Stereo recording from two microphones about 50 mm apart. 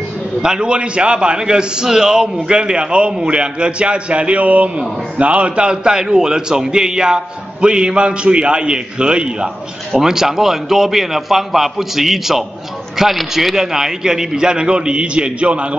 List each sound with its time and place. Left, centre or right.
0.4 s a man's voice: centre
9.9 s a man's voice: centre